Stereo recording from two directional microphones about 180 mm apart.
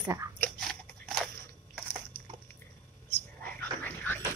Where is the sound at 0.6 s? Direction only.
5° left (ahead or behind).